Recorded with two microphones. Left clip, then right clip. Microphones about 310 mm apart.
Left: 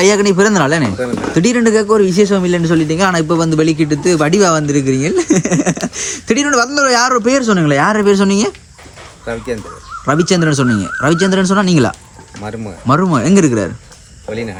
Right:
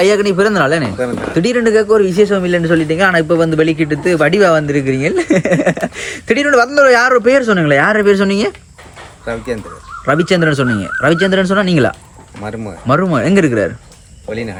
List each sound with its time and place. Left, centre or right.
0.0 s a man's voice: left
9.2 s speech: centre
10.1 s a man's voice: centre
12.4 s speech: centre
12.9 s a man's voice: centre